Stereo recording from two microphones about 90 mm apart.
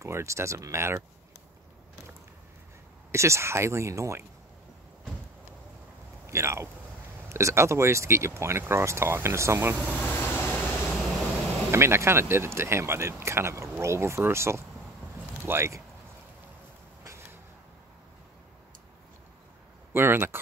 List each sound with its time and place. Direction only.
0.0 s speech: 30° right (ahead or behind)
3.1 s speech: 30° right (ahead or behind)
6.2 s speech: 30° right (ahead or behind)
9.9 s vehicle: 25° left (ahead or behind)
11.7 s speech: 30° right (ahead or behind)
17.0 s a sound: 30° right (ahead or behind)
19.9 s speech: 25° right (ahead or behind)